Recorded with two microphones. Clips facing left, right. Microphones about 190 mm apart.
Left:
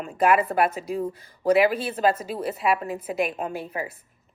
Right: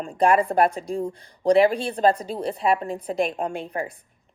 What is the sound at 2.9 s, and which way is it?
A woman's voice, 5° left (ahead or behind).